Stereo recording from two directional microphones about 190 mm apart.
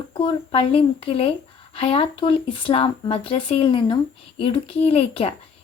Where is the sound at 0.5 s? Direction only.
30° left (ahead or behind).